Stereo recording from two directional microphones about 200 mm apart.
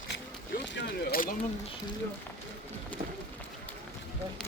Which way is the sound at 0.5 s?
55° left (ahead or behind).